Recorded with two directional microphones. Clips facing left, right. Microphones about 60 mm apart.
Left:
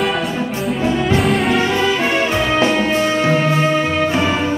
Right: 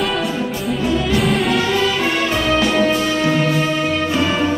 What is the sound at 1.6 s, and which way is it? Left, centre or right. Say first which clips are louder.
Music: left 1 dB; left.